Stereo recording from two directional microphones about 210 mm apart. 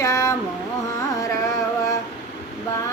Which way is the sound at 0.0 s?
15° left (ahead or behind).